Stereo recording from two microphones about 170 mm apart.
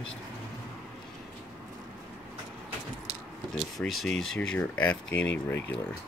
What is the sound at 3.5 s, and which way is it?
Speech, centre (ahead or behind).